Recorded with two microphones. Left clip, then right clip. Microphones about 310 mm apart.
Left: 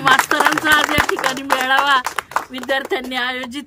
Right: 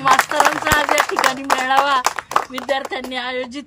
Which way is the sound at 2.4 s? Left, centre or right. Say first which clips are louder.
Left 1 dB; centre.